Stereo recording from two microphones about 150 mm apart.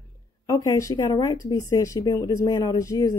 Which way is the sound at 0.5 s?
20° left (ahead or behind).